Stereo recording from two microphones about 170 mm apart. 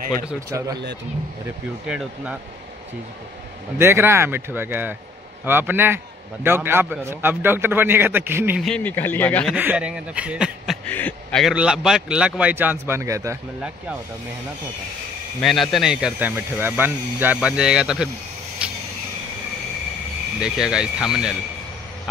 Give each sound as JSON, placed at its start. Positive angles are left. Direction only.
{"t": 0.5, "sound": "speech", "side_deg": -20}
{"t": 1.9, "sound": "speech", "side_deg": -5}
{"t": 3.7, "sound": "a man's voice", "side_deg": -15}
{"t": 8.5, "sound": "speech", "side_deg": 5}
{"t": 9.6, "sound": "a man's voice", "side_deg": -10}
{"t": 10.9, "sound": "a man's voice", "side_deg": 10}
{"t": 11.4, "sound": "a man's voice", "side_deg": -5}
{"t": 15.4, "sound": "speech", "side_deg": 0}
{"t": 18.6, "sound": "cricket", "side_deg": -5}
{"t": 20.3, "sound": "speech", "side_deg": -5}